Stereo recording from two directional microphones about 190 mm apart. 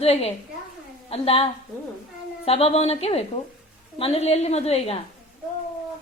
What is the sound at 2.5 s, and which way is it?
A woman's voice, 30° left (ahead or behind).